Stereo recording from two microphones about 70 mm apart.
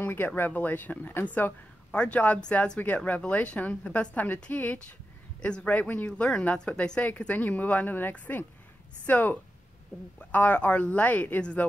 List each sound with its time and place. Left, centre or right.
0.0 s a sound: left
0.4 s speech: left
1.9 s speech: centre